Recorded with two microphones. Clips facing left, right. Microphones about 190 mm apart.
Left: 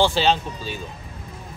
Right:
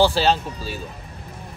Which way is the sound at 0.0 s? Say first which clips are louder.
Right 1 dB; 5° right (ahead or behind).